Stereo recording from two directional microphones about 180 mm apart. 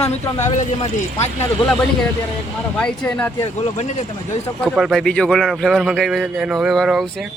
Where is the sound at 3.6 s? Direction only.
35° left (ahead or behind).